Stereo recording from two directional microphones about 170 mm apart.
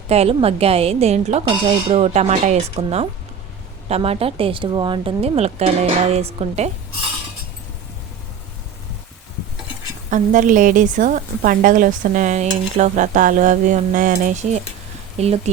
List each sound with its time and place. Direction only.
0.1 s speech: 35° right (ahead or behind)
10.1 s a woman's voice: 50° right (ahead or behind)